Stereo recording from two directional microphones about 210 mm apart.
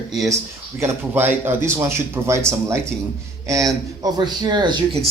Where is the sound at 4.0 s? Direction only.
20° right (ahead or behind).